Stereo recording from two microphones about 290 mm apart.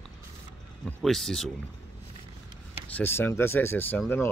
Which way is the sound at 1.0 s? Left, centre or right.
Centre.